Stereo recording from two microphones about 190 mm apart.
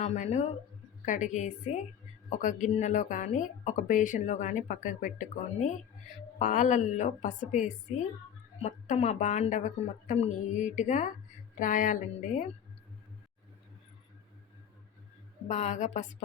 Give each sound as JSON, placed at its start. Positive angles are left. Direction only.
{"t": 0.0, "sound": "speech", "side_deg": 35}
{"t": 15.4, "sound": "speech", "side_deg": 35}